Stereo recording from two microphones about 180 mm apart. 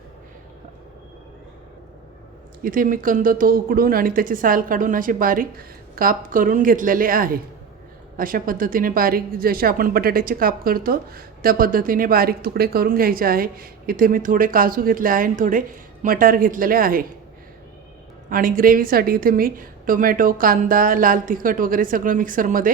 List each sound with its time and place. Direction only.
2.6 s speech: 50° right (ahead or behind)
18.3 s speech: 50° right (ahead or behind)